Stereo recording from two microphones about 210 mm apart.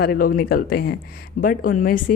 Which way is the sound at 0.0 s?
45° left (ahead or behind).